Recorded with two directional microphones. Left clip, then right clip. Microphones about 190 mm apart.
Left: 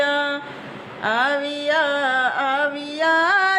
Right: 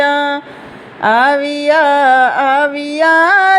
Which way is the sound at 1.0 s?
40° right (ahead or behind).